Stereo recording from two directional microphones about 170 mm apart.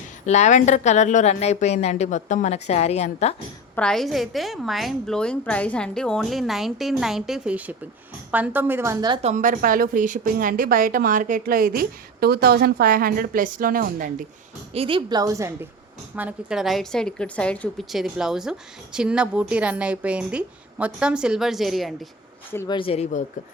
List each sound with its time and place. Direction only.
0.3 s a woman's voice: 45° left (ahead or behind)
3.8 s a woman's voice: 5° left (ahead or behind); by 9.2 s 25° right (ahead or behind)
9.2 s a woman's voice: 50° right (ahead or behind)
14.7 s a woman's voice: 30° right (ahead or behind)
16.1 s a woman's voice: 5° right (ahead or behind)
22.5 s speech: 25° left (ahead or behind)